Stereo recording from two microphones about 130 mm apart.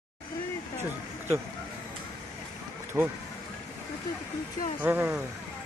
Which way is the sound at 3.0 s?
20° right (ahead or behind).